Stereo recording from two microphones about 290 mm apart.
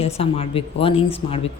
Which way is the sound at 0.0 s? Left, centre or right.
Left.